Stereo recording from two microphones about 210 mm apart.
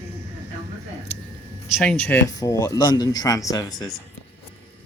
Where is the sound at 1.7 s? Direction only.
5° left (ahead or behind); by 3.9 s 20° left (ahead or behind).